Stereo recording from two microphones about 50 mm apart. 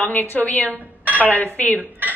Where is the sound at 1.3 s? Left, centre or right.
Left.